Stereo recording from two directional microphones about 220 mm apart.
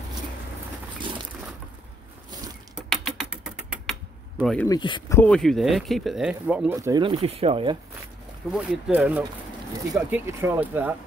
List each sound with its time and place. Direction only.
2.7 s typing: centre (ahead or behind)
4.4 s speech: centre (ahead or behind)
4.6 s speech: 20° left (ahead or behind)
5.2 s speech: 5° left (ahead or behind); by 7.7 s 25° right (ahead or behind)
8.5 s speech: 5° right (ahead or behind)